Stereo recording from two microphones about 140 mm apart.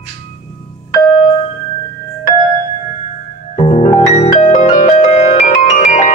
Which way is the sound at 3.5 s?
50° left (ahead or behind).